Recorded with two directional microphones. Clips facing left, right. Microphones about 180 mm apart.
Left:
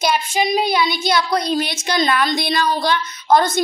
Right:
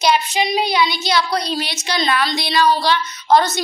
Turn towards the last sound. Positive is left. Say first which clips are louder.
# even
turn(degrees=50)  # may be behind; listen again after turning